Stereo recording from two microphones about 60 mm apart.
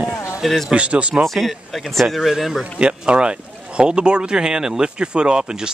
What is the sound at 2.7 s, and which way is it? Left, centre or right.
Speech, centre.